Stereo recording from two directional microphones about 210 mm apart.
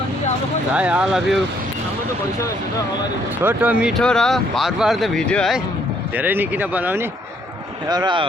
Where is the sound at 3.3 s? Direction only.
10° right (ahead or behind).